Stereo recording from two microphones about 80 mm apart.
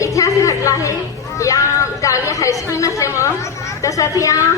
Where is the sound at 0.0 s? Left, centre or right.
Left.